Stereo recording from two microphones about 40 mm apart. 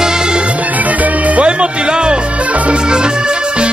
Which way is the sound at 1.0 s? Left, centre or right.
Right.